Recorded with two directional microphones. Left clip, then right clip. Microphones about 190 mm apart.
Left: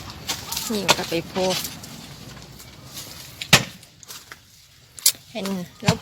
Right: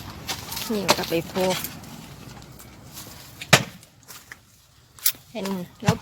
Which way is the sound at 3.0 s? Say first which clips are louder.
Left 1 dB; centre (ahead or behind).